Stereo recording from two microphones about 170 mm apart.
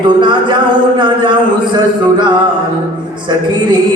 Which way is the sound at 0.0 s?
25° right (ahead or behind).